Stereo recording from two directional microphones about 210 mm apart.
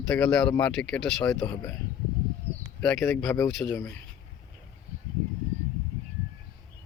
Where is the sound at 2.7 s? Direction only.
5° left (ahead or behind).